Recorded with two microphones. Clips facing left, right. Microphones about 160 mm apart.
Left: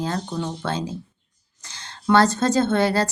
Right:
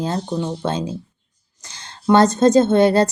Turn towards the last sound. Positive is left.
turn(degrees=-20)  # may be behind; listen again after turning